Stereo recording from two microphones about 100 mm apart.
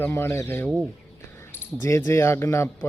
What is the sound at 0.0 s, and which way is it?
Speech, 25° left (ahead or behind).